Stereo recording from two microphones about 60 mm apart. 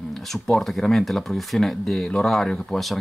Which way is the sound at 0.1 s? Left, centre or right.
Centre.